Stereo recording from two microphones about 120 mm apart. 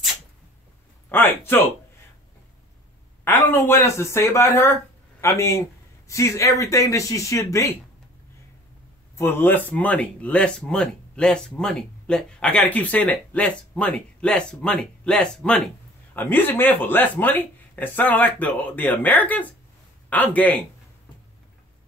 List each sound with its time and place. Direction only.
1.0 s speech: 15° left (ahead or behind)
3.3 s speech: 15° left (ahead or behind)
9.1 s speech: 20° left (ahead or behind)